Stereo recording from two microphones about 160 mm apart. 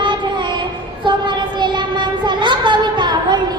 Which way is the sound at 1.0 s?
30° right (ahead or behind).